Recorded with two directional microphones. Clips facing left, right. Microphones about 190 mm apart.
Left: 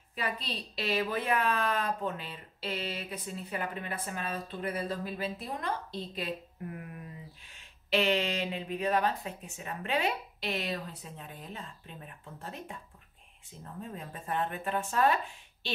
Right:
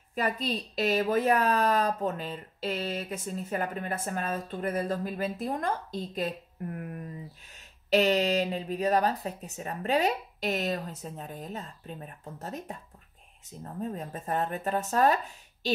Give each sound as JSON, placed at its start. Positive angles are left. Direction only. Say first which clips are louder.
{"t": 0.1, "sound": "a woman's voice", "louder": "right 6 dB", "side_deg": -45}